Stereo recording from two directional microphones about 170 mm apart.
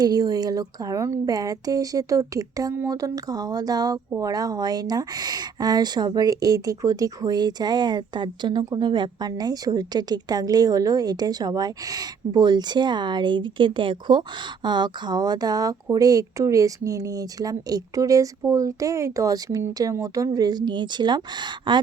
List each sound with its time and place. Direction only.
0.0 s speech: 20° right (ahead or behind)